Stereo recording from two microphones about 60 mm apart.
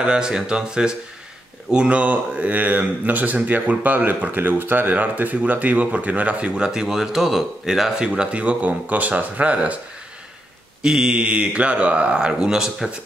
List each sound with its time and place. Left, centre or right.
0.0 s speech: centre
10.8 s speech: centre